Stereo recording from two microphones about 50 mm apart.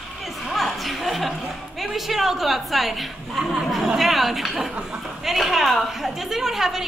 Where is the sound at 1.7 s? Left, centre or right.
Centre.